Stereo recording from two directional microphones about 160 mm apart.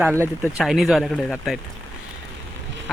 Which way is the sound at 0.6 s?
Centre (ahead or behind).